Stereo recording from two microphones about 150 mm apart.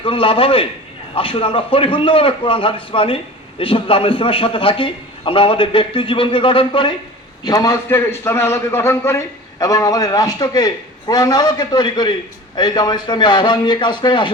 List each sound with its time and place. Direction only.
0.0 s a man's voice: 35° left (ahead or behind)